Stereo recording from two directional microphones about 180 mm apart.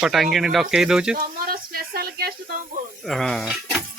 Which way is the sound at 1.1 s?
55° right (ahead or behind).